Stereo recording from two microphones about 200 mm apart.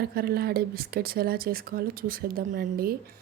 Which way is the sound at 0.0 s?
50° right (ahead or behind).